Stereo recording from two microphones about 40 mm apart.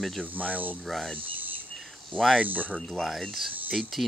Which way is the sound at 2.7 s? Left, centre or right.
Centre.